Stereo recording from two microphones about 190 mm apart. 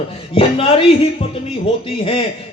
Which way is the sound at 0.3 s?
30° left (ahead or behind).